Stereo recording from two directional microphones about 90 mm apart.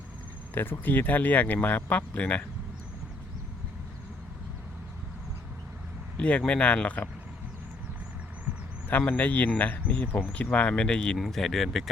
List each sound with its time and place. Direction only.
0.5 s speech: 25° left (ahead or behind)
6.1 s speech: 15° left (ahead or behind)
8.9 s speech: 20° left (ahead or behind); by 11.9 s centre (ahead or behind)